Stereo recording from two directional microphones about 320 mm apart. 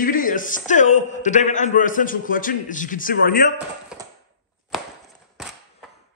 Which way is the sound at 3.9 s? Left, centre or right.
Centre.